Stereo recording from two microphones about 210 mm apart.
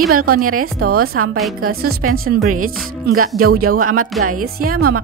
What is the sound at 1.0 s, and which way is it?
Speech, 90° right.